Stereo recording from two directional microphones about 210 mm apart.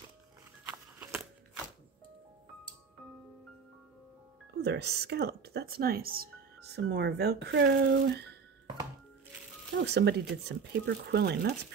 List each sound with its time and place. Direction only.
0.7 s a sound: 10° right (ahead or behind)
4.6 s speech: 50° right (ahead or behind)
9.8 s speech: 55° right (ahead or behind)